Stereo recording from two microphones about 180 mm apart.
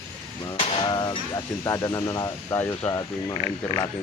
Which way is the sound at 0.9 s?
20° left (ahead or behind).